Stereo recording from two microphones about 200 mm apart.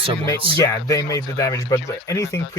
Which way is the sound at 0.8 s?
15° left (ahead or behind).